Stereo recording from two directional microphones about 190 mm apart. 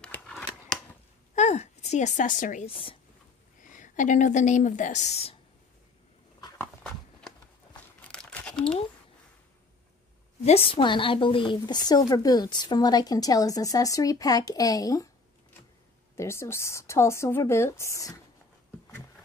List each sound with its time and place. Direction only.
0.0 s scissors: 5° left (ahead or behind)
1.3 s a woman's voice: 35° left (ahead or behind)
2.7 s a woman's voice: 30° left (ahead or behind)
3.6 s a woman's voice: 40° left (ahead or behind)
6.6 s a sound: 5° left (ahead or behind)
8.1 s crumpling: 5° left (ahead or behind)
10.4 s a woman's voice: 30° left (ahead or behind)
16.2 s speech: 15° left (ahead or behind)